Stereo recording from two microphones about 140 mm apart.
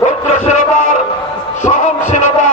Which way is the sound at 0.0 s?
60° left (ahead or behind).